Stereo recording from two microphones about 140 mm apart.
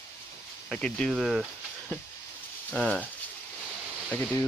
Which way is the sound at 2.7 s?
10° left (ahead or behind).